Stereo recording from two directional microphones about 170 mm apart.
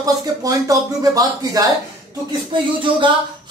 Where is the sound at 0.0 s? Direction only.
20° right (ahead or behind).